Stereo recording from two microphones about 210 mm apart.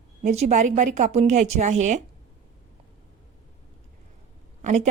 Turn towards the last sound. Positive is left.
turn(degrees=-35)  # may be behind; listen again after turning